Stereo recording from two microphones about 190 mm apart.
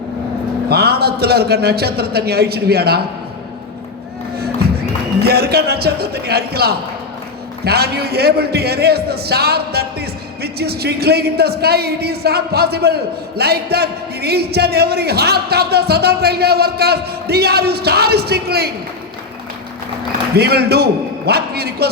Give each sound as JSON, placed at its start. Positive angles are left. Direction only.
{"t": 0.7, "sound": "a man's voice", "side_deg": -55}
{"t": 5.2, "sound": "a man's voice", "side_deg": -55}
{"t": 20.3, "sound": "a man's voice", "side_deg": -60}